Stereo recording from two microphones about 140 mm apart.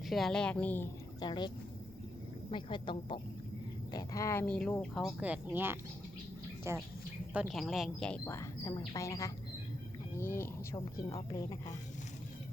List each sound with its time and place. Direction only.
0.1 s speech: centre (ahead or behind)
1.2 s speech: 30° left (ahead or behind)
2.5 s speech: 35° left (ahead or behind)
3.9 s a woman's voice: 25° left (ahead or behind)
4.4 s speech: 5° left (ahead or behind)
5.2 s speech: 10° right (ahead or behind)
7.3 s speech: centre (ahead or behind)
8.2 s a woman's voice: 20° left (ahead or behind)